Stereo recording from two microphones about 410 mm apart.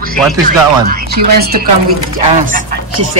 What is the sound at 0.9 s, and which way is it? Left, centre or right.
Speech, right.